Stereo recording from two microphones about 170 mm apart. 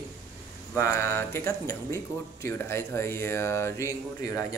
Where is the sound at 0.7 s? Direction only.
15° left (ahead or behind).